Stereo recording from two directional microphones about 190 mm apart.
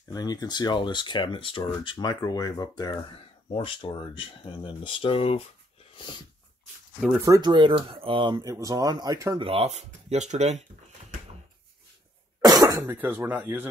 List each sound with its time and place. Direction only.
0.1 s speech: 20° left (ahead or behind)
7.0 s speech: 5° right (ahead or behind)
7.2 s speech: 20° right (ahead or behind)
9.5 s speech: 35° right (ahead or behind)
12.4 s speech: 20° right (ahead or behind)